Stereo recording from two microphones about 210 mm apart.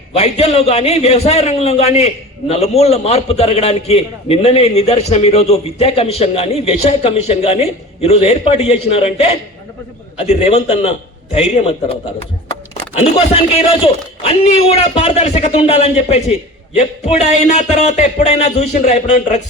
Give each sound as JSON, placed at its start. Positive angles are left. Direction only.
{"t": 0.1, "sound": "a man's voice", "side_deg": 30}
{"t": 13.5, "sound": "a man's voice", "side_deg": 25}